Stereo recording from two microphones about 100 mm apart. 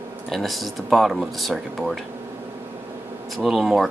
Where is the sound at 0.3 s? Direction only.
Centre (ahead or behind).